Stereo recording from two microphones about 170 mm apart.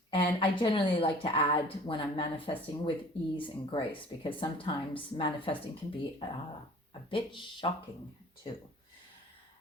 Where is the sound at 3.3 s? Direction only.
30° left (ahead or behind).